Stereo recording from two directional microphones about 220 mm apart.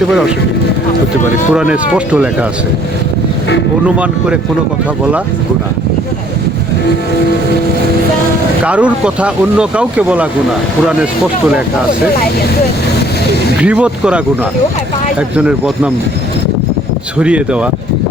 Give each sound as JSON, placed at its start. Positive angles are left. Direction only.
{"t": 1.5, "sound": "speech", "side_deg": -5}
{"t": 3.8, "sound": "speech", "side_deg": -5}
{"t": 8.6, "sound": "speech", "side_deg": -5}
{"t": 13.6, "sound": "speech", "side_deg": -5}
{"t": 15.4, "sound": "speech", "side_deg": -5}
{"t": 17.2, "sound": "speech", "side_deg": -5}